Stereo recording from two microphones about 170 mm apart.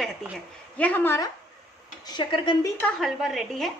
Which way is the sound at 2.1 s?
30° left (ahead or behind).